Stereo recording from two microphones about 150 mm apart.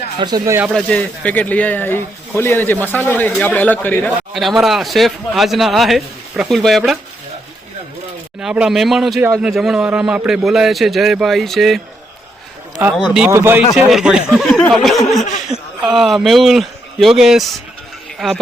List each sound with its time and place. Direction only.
0.2 s speech: 30° right (ahead or behind)
0.7 s speech: 5° left (ahead or behind)
4.4 s a man's voice: centre (ahead or behind)
8.4 s a man's voice: 5° right (ahead or behind)
12.8 s a man's voice: 5° right (ahead or behind)
14.4 s speech: 15° left (ahead or behind)
14.7 s a man's voice: centre (ahead or behind)
15.2 s speech: 50° left (ahead or behind)
15.9 s a man's voice: centre (ahead or behind)